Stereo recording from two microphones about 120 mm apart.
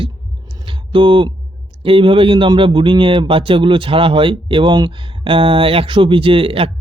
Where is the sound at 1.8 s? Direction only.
45° right (ahead or behind).